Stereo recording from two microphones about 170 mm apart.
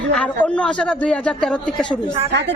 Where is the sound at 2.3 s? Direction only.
90° right.